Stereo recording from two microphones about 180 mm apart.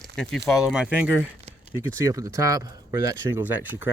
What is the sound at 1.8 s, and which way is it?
Speech, 20° right (ahead or behind).